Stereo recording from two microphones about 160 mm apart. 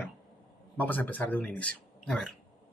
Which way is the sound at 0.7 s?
10° left (ahead or behind).